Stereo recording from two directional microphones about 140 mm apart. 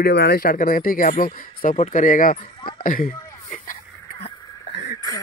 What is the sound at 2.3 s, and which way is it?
Speech, 35° left (ahead or behind).